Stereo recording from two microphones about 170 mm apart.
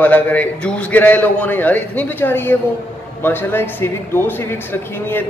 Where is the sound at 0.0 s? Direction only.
10° left (ahead or behind).